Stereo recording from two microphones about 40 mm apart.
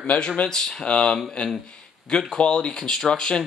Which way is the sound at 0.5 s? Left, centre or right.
Centre.